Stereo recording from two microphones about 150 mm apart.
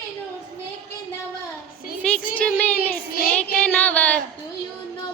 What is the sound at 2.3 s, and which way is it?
Child singing, 10° left (ahead or behind).